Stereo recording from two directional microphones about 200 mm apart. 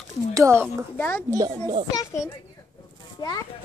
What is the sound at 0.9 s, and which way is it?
Speech, 10° left (ahead or behind).